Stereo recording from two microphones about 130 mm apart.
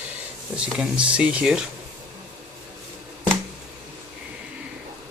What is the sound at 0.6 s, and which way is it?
Speech, 10° right (ahead or behind).